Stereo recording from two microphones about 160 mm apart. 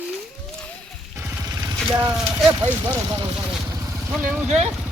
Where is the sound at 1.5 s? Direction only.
25° right (ahead or behind).